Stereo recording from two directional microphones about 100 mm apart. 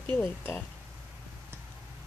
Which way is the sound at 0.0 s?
20° left (ahead or behind).